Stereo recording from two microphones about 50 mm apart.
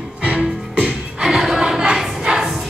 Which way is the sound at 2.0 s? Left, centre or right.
Centre.